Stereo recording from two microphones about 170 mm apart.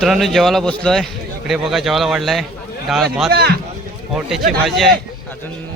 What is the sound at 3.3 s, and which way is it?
Speech, 65° right (ahead or behind).